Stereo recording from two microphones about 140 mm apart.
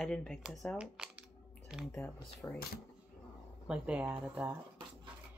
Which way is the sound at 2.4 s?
15° left (ahead or behind).